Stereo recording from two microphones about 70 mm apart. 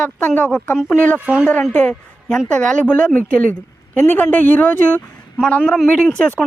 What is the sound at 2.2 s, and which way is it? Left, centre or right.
Speech, centre.